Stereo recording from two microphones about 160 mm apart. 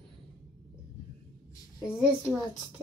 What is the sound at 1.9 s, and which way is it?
Speech, 5° right (ahead or behind).